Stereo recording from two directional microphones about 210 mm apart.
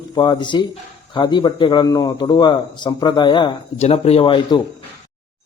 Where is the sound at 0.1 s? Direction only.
20° left (ahead or behind).